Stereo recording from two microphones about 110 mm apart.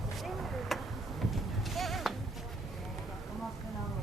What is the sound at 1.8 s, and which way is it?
Music, centre (ahead or behind).